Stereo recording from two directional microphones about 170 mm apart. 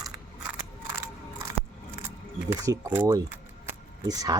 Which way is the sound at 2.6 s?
20° right (ahead or behind).